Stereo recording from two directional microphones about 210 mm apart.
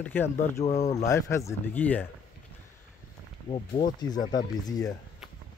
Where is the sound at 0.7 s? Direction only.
35° left (ahead or behind).